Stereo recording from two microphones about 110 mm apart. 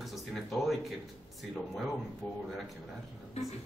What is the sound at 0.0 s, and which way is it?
Speech, centre (ahead or behind).